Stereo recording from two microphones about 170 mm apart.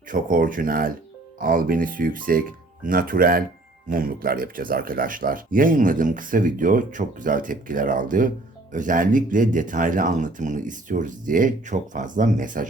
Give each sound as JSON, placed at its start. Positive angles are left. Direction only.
{"t": 0.1, "sound": "speech", "side_deg": -55}